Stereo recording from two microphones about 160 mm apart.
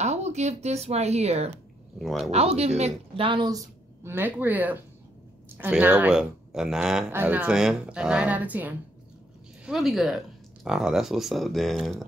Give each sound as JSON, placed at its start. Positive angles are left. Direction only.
{"t": 0.0, "sound": "speech", "side_deg": -45}
{"t": 2.0, "sound": "speech", "side_deg": 0}
{"t": 2.3, "sound": "speech", "side_deg": -40}